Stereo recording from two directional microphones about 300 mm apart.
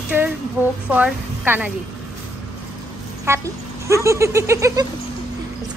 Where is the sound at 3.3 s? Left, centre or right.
Centre.